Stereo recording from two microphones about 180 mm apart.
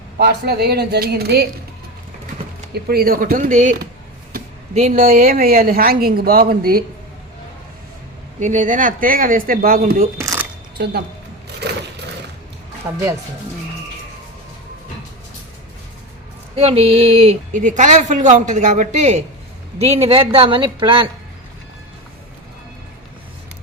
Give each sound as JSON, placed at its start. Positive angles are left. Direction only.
{"t": 0.2, "sound": "speech", "side_deg": -65}
{"t": 2.7, "sound": "speech", "side_deg": -60}
{"t": 8.4, "sound": "speech", "side_deg": -45}
{"t": 10.2, "sound": "a sound", "side_deg": -15}
{"t": 10.8, "sound": "a woman's voice", "side_deg": -65}
{"t": 12.8, "sound": "speech", "side_deg": -15}
{"t": 16.6, "sound": "a woman's voice", "side_deg": -35}